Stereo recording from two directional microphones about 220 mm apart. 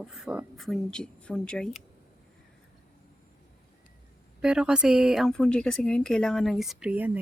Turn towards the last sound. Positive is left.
turn(degrees=-5)  # may be behind; listen again after turning